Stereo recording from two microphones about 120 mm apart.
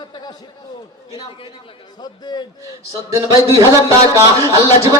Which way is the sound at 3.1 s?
25° right (ahead or behind).